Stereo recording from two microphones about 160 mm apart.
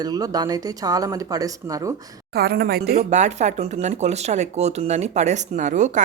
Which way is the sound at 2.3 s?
75° right (ahead or behind).